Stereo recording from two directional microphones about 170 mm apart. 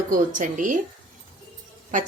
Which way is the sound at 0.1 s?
50° right (ahead or behind).